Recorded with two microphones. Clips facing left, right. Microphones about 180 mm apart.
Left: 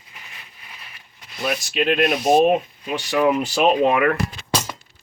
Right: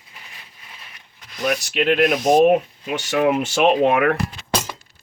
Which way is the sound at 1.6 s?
70° right (ahead or behind).